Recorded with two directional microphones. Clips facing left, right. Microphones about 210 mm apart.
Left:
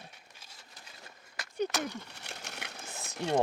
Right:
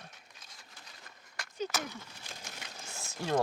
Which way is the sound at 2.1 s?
70° left (ahead or behind).